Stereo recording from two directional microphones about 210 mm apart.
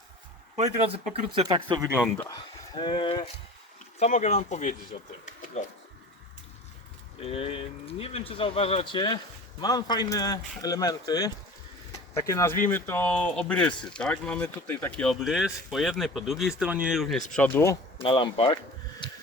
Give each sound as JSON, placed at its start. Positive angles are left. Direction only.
{"t": 0.5, "sound": "speech", "side_deg": -30}
{"t": 2.1, "sound": "a man's voice", "side_deg": 20}
{"t": 4.0, "sound": "speech", "side_deg": 35}
{"t": 7.2, "sound": "a man's voice", "side_deg": 30}
{"t": 17.9, "sound": "a sound", "side_deg": 25}